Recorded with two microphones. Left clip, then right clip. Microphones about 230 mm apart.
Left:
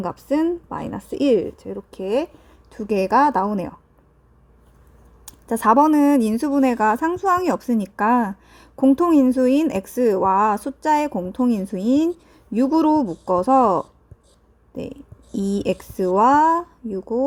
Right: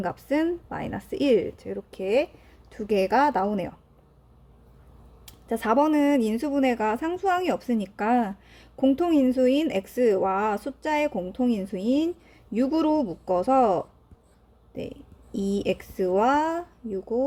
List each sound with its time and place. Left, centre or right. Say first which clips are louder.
0.0 s a woman's voice: left 4 dB; centre
5.2 s a woman's voice: left 9 dB; left
8.4 s a sound: left 5 dB; left
9.0 s a woman's voice: left 4 dB; left